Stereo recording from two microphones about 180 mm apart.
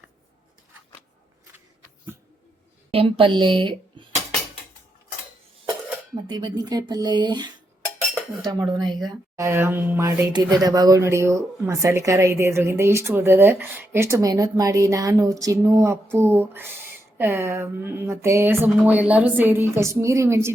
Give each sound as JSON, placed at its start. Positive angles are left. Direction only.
{"t": 2.9, "sound": "speech", "side_deg": -30}
{"t": 6.2, "sound": "speech", "side_deg": -20}